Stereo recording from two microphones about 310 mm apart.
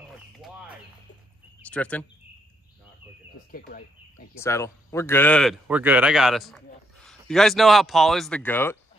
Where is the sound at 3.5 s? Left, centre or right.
Left.